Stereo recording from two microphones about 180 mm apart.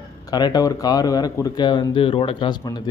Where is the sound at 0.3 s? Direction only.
20° left (ahead or behind).